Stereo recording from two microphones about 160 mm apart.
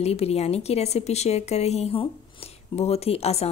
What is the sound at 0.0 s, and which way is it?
A woman's voice, 40° left (ahead or behind).